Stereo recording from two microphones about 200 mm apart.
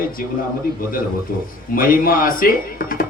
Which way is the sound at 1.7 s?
45° left (ahead or behind).